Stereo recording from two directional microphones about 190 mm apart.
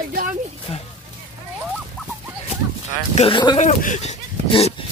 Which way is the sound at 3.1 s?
30° left (ahead or behind).